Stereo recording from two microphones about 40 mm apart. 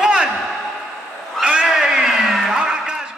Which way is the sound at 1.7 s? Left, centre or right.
Centre.